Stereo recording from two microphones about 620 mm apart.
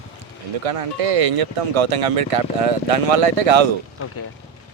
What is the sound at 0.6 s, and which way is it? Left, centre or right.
Speech, right.